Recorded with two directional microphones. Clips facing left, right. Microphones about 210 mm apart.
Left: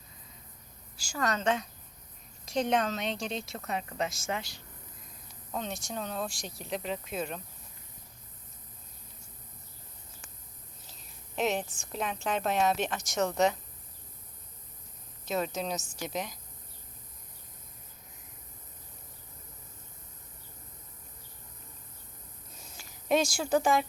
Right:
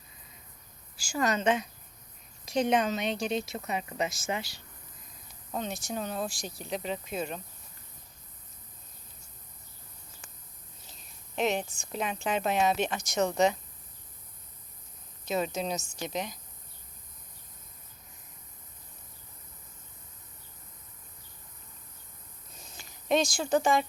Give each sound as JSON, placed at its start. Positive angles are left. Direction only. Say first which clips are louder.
{"t": 0.9, "sound": "a woman's voice", "louder": "right 3 dB", "side_deg": -10}
{"t": 11.3, "sound": "a woman's voice", "louder": "right 1 dB", "side_deg": 5}
{"t": 15.2, "sound": "a woman's voice", "louder": "right 1 dB", "side_deg": 0}
{"t": 22.6, "sound": "a sound", "louder": "right 1 dB", "side_deg": 5}